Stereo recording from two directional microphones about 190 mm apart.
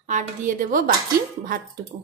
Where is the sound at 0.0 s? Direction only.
40° right (ahead or behind).